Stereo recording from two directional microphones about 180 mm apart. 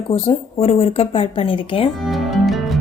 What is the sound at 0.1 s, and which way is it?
A woman's voice, 35° left (ahead or behind).